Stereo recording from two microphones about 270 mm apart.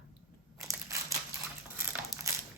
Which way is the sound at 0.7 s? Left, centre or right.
Centre.